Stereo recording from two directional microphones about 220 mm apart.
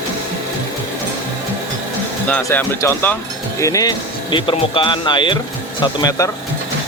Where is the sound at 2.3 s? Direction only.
10° left (ahead or behind).